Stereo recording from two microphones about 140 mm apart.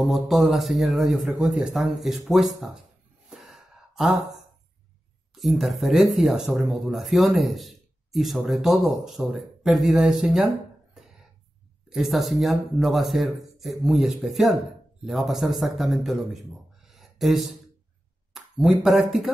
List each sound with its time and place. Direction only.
0.1 s speech: centre (ahead or behind)
3.3 s gasp: centre (ahead or behind)
5.3 s speech: centre (ahead or behind)
11.9 s speech: centre (ahead or behind)
16.8 s a sound: centre (ahead or behind)
18.3 s speech: 5° right (ahead or behind)